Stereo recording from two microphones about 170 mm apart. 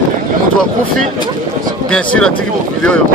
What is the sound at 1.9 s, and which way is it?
Speech, 5° left (ahead or behind).